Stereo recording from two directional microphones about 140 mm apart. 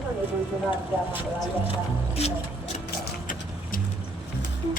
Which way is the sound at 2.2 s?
45° left (ahead or behind).